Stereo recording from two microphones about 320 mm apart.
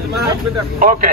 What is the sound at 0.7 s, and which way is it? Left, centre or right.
Speech, right.